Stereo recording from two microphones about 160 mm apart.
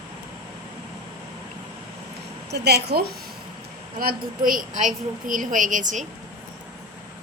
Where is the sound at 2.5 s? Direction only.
90° right.